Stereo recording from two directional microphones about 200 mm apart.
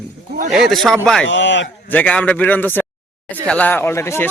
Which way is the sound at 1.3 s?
65° left (ahead or behind).